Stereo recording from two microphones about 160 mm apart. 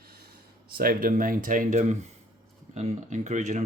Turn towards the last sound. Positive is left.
turn(degrees=-50)  # may be behind; listen again after turning